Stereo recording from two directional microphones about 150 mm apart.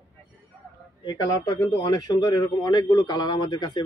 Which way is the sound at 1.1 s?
25° left (ahead or behind).